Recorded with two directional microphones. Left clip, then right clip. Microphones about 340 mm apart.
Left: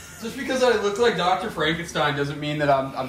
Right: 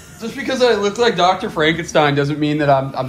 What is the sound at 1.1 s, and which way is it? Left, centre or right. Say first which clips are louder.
A man's voice: right 7 dB; centre.